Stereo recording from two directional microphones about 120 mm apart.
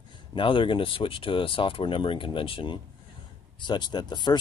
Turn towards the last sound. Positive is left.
turn(degrees=35)  # may be behind; listen again after turning